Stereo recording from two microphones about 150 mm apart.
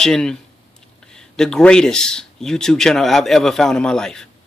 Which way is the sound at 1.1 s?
5° left (ahead or behind).